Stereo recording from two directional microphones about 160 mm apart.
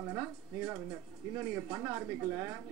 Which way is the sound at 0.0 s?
15° right (ahead or behind).